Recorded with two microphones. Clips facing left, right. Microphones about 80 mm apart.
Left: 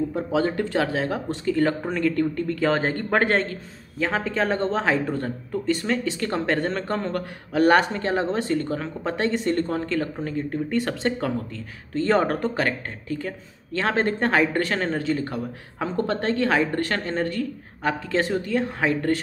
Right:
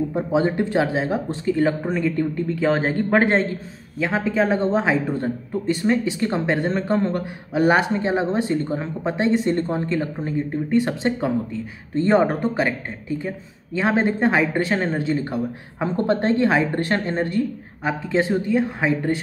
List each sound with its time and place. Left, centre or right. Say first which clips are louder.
0.1 s speech: right 3 dB; right
4.0 s speech: right 3 dB; centre